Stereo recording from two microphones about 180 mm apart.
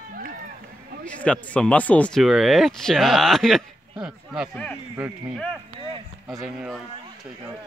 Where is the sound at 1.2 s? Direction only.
5° left (ahead or behind).